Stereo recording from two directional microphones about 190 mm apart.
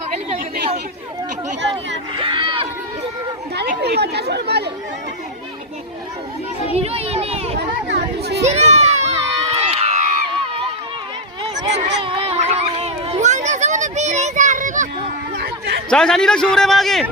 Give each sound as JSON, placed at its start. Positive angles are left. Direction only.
{"t": 2.1, "sound": "run", "side_deg": -25}
{"t": 3.5, "sound": "speech", "side_deg": -60}
{"t": 6.7, "sound": "a sound", "side_deg": -30}
{"t": 7.9, "sound": "chatter", "side_deg": -60}
{"t": 8.4, "sound": "crowd", "side_deg": -35}
{"t": 11.7, "sound": "a sound", "side_deg": -65}
{"t": 12.0, "sound": "children playing", "side_deg": -25}
{"t": 15.4, "sound": "a sound", "side_deg": -60}
{"t": 15.9, "sound": "a man's voice", "side_deg": 5}